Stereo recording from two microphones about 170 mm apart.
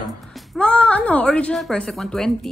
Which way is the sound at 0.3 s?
5° left (ahead or behind).